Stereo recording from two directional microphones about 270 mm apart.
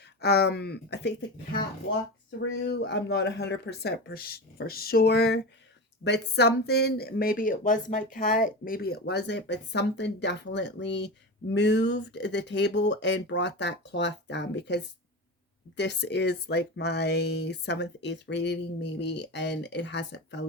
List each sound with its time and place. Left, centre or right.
0.2 s speech: left
2.4 s speech: left